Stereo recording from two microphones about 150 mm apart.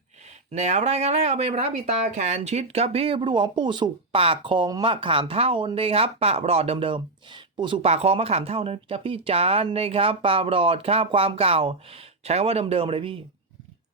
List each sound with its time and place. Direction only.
0.5 s speech: 50° right (ahead or behind); by 13.2 s 35° right (ahead or behind)